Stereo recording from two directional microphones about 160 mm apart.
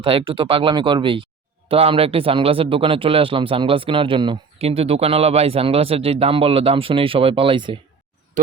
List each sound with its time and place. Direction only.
0.0 s speech: 35° right (ahead or behind)